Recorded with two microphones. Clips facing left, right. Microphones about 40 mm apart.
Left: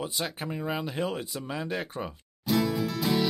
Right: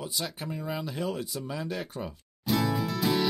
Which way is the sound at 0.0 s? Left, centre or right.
Left.